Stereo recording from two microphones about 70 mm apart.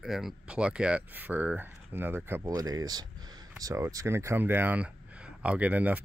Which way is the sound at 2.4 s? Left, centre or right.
Right.